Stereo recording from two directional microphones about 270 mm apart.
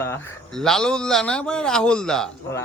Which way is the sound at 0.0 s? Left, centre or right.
Centre.